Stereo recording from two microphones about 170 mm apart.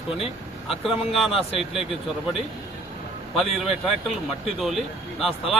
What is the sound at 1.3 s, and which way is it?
Speech, 35° left (ahead or behind).